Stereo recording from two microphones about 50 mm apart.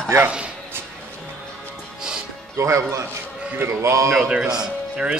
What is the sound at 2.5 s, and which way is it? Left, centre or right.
Speech, right.